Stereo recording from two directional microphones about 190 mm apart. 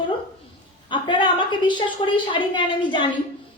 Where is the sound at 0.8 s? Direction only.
25° left (ahead or behind).